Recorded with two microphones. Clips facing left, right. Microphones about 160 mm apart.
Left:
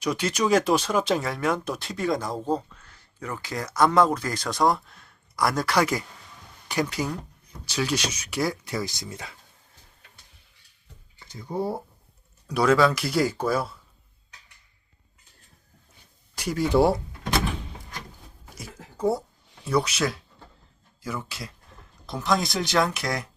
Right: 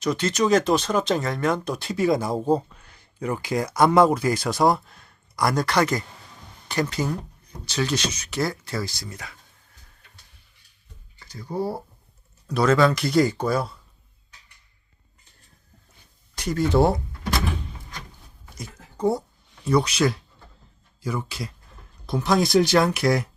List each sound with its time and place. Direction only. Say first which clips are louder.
0.0 s speech: right 3 dB; 10° left (ahead or behind)
11.2 s a sound: right 2 dB; 20° left (ahead or behind)
11.4 s speech: right 1 dB; 5° right (ahead or behind)
12.5 s speech: right 1 dB; 10° left (ahead or behind)
16.3 s speech: right 1 dB; 10° left (ahead or behind)
18.5 s a sound: right 2 dB; 5° left (ahead or behind)
19.6 s speech: right 4 dB; 5° left (ahead or behind)